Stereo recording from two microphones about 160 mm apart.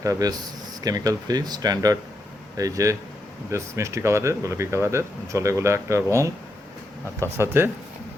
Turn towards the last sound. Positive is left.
turn(degrees=-15)  # may be behind; listen again after turning